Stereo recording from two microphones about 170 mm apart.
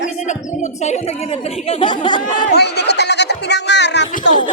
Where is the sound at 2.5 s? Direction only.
75° left (ahead or behind).